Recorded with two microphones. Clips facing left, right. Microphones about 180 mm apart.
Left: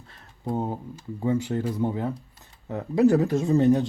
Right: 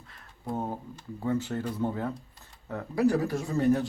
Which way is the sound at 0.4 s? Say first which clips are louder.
Left 4 dB; 15° left (ahead or behind).